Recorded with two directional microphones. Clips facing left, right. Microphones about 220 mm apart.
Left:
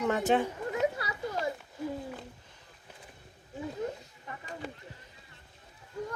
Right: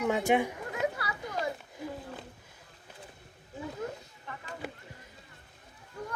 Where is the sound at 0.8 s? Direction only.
20° left (ahead or behind).